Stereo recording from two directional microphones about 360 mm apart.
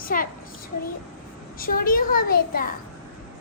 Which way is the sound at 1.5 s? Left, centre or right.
Left.